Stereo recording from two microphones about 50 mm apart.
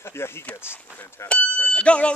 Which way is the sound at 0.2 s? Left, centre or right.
Left.